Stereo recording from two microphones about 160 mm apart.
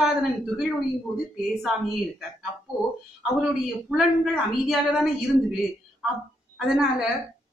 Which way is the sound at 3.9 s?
Centre (ahead or behind).